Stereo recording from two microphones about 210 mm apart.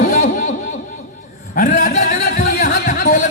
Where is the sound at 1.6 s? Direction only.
40° left (ahead or behind).